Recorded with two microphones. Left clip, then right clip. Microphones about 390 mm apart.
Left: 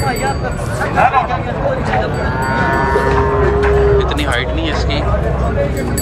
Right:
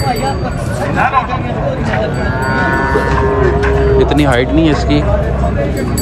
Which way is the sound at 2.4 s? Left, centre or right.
Left.